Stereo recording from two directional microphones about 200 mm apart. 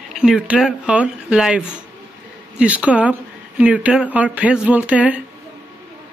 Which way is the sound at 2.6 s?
5° right (ahead or behind).